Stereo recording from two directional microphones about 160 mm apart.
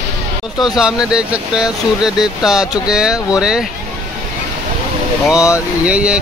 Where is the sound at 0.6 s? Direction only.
5° right (ahead or behind).